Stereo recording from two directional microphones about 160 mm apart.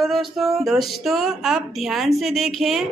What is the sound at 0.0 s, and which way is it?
Speech, centre (ahead or behind).